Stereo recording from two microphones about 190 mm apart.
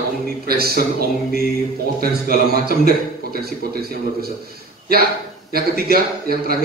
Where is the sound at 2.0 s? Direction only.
55° right (ahead or behind).